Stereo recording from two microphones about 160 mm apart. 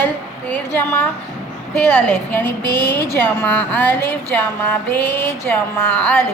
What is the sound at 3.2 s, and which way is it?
Music, 10° left (ahead or behind).